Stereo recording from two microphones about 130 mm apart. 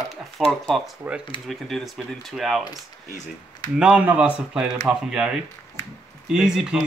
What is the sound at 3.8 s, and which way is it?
Speech, 10° right (ahead or behind).